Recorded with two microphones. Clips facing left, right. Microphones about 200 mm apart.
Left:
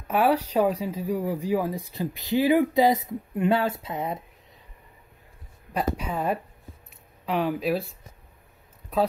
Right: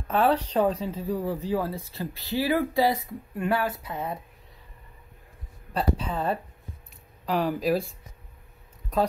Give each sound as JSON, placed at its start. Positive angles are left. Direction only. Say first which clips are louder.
{"t": 0.1, "sound": "speech", "louder": "left 1 dB", "side_deg": 10}
{"t": 5.9, "sound": "speech", "louder": "left 1 dB", "side_deg": 10}